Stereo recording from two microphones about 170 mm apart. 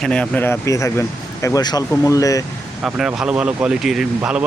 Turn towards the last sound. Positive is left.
turn(degrees=-5)  # may be behind; listen again after turning